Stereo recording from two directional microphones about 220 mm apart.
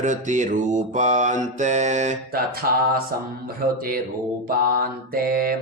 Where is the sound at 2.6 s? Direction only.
45° right (ahead or behind).